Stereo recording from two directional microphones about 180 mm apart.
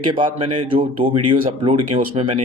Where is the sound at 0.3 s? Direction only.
30° right (ahead or behind).